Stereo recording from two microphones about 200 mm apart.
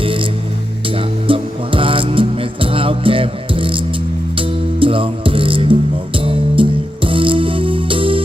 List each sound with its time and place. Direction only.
0.0 s music: 25° right (ahead or behind)